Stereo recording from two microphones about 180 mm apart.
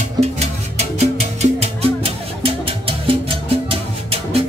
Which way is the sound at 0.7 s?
35° right (ahead or behind).